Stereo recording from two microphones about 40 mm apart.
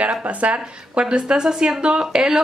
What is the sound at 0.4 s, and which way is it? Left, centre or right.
A woman's voice, right.